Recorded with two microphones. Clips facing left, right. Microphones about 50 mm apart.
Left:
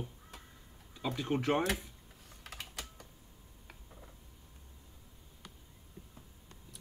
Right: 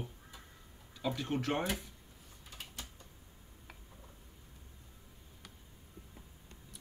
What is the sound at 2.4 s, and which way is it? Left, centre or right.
Typing, left.